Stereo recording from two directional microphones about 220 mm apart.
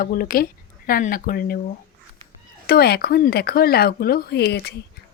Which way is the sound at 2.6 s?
45° left (ahead or behind).